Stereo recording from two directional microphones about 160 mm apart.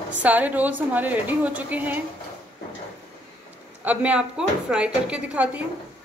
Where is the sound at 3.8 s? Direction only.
10° right (ahead or behind).